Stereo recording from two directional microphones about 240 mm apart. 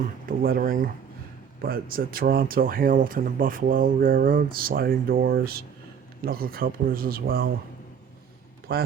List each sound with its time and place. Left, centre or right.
0.0 s speech: right
8.7 s speech: right